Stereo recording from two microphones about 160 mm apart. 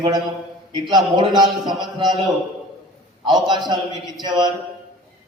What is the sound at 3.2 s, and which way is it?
Speech, 25° right (ahead or behind).